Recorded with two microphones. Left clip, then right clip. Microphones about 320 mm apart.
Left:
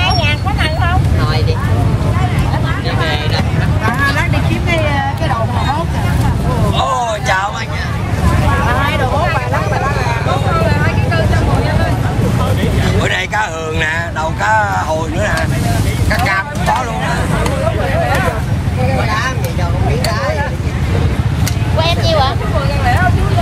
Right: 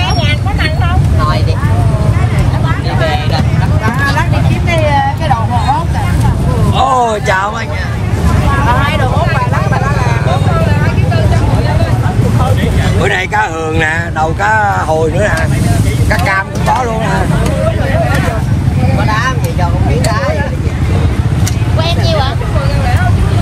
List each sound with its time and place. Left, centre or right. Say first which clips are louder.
3.0 s vehicle: right 3 dB; centre
6.8 s a sound: right 7 dB; centre
8.6 s vehicle: right 5 dB; right
13.0 s a sound: right 5 dB; centre
16.1 s vehicle: right 2 dB; centre
19.0 s vehicle: right 3 dB; right
21.8 s vehicle: left 1 dB; left